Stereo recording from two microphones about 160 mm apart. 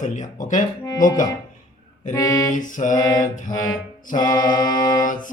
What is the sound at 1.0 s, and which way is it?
Music, 55° left (ahead or behind).